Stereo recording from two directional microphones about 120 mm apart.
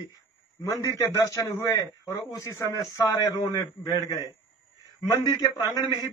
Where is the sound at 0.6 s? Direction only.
25° left (ahead or behind).